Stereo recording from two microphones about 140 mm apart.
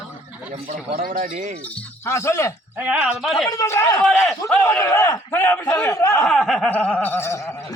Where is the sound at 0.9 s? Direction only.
70° right (ahead or behind).